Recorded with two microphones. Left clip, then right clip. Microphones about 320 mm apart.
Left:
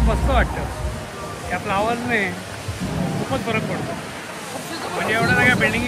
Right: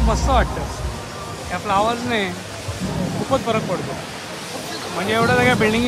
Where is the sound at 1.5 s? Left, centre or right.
Centre.